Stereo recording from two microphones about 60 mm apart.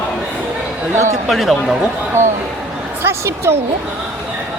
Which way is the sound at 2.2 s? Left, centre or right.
Right.